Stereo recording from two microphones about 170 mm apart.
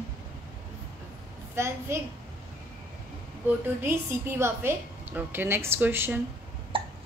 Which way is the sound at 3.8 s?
15° right (ahead or behind).